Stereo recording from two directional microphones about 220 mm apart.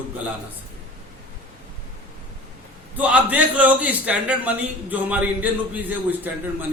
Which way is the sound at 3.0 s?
5° right (ahead or behind).